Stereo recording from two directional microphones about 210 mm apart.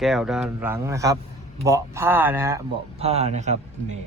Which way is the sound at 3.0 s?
30° right (ahead or behind).